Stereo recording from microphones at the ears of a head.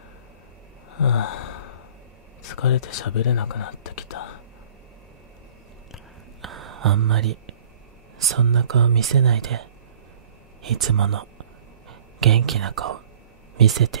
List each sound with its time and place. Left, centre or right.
0.9 s gasp: left
2.4 s speech: left
6.4 s whispering: right
8.2 s speech: right